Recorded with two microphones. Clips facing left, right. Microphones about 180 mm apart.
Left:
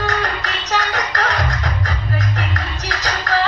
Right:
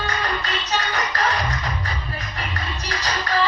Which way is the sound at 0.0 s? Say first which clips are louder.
Left 4 dB; 85° left.